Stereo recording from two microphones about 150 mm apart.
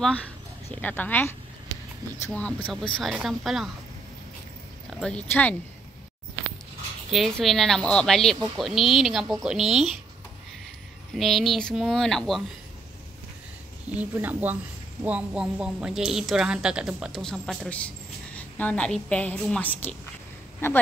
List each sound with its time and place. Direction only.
0.7 s a woman's voice: 10° left (ahead or behind)
2.3 s a woman's voice: 5° left (ahead or behind)
5.0 s a woman's voice: 10° left (ahead or behind)
7.1 s a woman's voice: centre (ahead or behind)
11.1 s a woman's voice: centre (ahead or behind)
13.8 s a woman's voice: 10° right (ahead or behind); by 20.8 s 15° left (ahead or behind)